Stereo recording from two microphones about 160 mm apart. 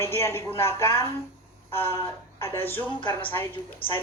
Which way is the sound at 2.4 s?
15° left (ahead or behind).